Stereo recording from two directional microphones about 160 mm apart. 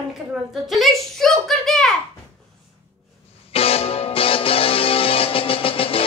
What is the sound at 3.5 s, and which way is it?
Music, 35° left (ahead or behind).